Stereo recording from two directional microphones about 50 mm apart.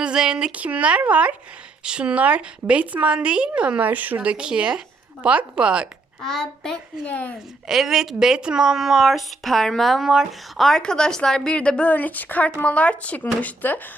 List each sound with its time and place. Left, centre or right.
0.0 s a woman's voice: centre
3.8 s speech: right
4.2 s a woman's voice: right
6.2 s speech: centre
7.0 s speech: left
7.7 s a woman's voice: centre
10.8 s speech: centre
13.4 s speech: left